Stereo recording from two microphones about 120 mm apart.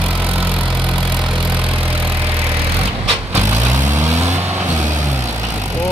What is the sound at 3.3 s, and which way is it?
Vehicle, 20° right (ahead or behind).